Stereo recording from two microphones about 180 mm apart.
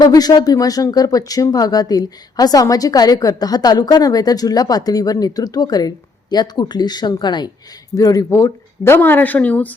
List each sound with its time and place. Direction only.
0.0 s speech: 20° left (ahead or behind)